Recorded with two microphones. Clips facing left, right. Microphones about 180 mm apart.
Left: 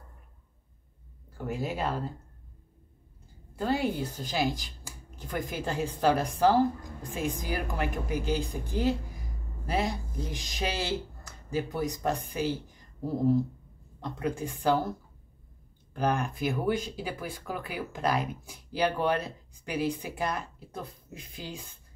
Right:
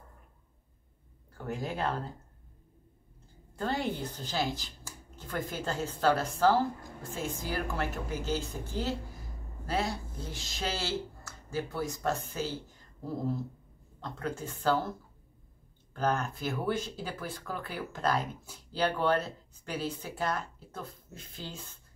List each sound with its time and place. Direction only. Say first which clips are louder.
1.4 s speech: left 2 dB; 10° left (ahead or behind)
3.5 s speech: left 4 dB; 10° left (ahead or behind)